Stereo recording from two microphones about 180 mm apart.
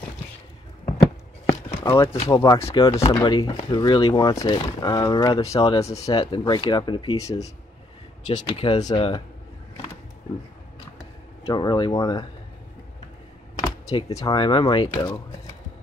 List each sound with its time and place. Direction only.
1.4 s chop: 20° left (ahead or behind)
2.2 s speech: 20° left (ahead or behind)
8.4 s speech: 30° left (ahead or behind)
11.0 s speech: 20° left (ahead or behind)
13.6 s speech: 25° left (ahead or behind)